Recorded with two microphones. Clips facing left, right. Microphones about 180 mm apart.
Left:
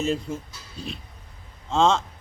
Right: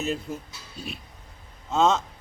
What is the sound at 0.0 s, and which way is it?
Speech, centre (ahead or behind).